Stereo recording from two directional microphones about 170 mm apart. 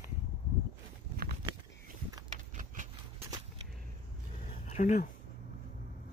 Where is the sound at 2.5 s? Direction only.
45° right (ahead or behind).